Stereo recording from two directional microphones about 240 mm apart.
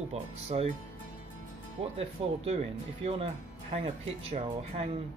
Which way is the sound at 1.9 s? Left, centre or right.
Right.